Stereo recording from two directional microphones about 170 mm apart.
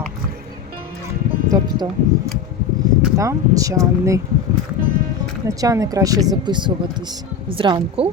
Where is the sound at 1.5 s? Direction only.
20° right (ahead or behind).